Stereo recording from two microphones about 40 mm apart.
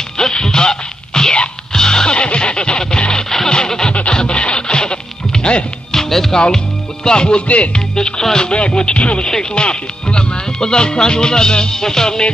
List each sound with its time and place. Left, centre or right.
0.2 s music: centre
5.9 s music: centre
6.3 s speech: centre
7.4 s music: left
7.9 s speech: centre
8.5 s speech: left